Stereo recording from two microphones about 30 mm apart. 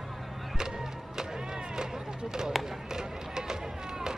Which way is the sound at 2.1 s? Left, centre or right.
Right.